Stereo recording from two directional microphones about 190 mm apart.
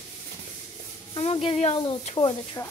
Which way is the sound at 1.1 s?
30° left (ahead or behind).